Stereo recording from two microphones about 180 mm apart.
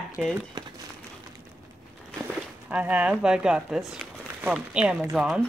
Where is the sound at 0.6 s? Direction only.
20° right (ahead or behind).